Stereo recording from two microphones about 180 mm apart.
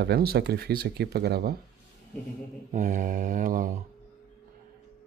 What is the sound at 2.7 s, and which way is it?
Mantra, 45° right (ahead or behind).